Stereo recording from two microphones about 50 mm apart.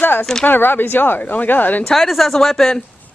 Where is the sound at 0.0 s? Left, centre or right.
Left.